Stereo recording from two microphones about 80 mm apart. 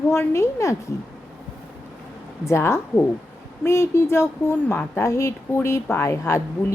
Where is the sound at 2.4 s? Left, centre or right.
Left.